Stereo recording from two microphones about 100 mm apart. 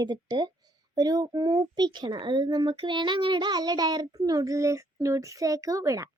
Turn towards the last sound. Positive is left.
turn(degrees=-35)  # may be behind; listen again after turning